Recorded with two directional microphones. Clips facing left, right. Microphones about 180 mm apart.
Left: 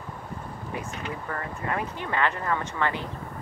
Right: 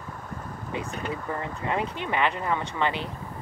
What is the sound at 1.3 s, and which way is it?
Speech, 20° right (ahead or behind).